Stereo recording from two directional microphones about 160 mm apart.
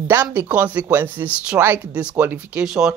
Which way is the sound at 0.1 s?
10° right (ahead or behind).